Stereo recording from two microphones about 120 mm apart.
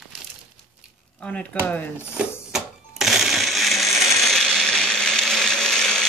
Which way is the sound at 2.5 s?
Centre (ahead or behind).